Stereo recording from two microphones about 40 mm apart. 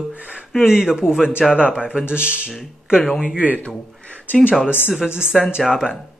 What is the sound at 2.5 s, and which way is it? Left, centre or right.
Speech, centre.